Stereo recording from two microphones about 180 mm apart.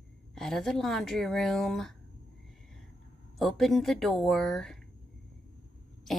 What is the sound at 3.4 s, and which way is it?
Speech, centre (ahead or behind).